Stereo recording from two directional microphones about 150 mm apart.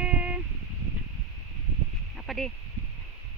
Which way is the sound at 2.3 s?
Centre (ahead or behind).